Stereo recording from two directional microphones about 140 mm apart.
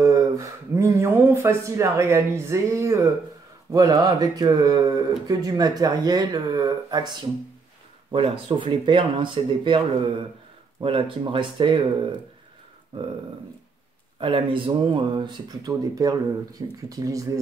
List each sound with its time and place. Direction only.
0.0 s speech: 25° right (ahead or behind)
10.8 s speech: 40° right (ahead or behind)
14.2 s speech: 35° right (ahead or behind)